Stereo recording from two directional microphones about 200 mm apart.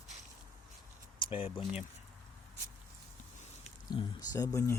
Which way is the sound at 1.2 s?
25° left (ahead or behind).